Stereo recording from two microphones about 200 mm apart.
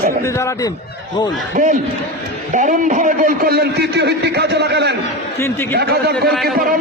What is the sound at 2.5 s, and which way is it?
A man's voice, 40° right (ahead or behind).